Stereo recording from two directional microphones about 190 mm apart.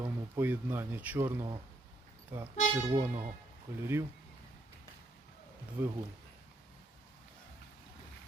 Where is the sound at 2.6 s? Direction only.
15° right (ahead or behind).